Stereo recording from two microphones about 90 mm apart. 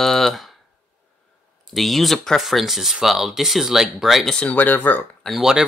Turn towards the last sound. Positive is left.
turn(degrees=-5)  # may be behind; listen again after turning